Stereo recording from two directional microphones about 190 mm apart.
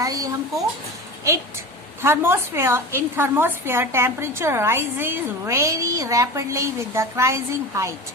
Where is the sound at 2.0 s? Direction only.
10° right (ahead or behind).